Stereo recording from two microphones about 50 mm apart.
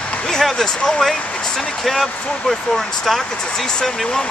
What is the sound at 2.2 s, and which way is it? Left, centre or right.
Speech, left.